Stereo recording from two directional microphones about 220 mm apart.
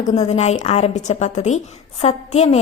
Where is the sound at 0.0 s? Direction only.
30° left (ahead or behind).